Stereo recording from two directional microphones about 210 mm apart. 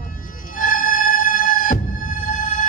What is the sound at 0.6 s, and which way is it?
Music, 40° left (ahead or behind).